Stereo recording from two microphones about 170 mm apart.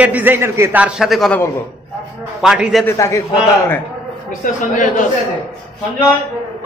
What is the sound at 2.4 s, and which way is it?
Speech, 5° right (ahead or behind).